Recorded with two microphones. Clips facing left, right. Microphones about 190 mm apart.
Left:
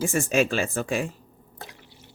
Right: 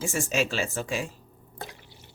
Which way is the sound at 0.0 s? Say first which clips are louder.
Left 5 dB; 55° left (ahead or behind).